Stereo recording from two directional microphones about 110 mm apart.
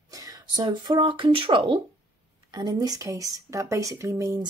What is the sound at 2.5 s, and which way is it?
Speech, 35° right (ahead or behind).